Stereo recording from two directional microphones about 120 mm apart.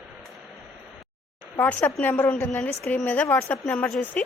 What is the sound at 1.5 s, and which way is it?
A woman's voice, 15° left (ahead or behind).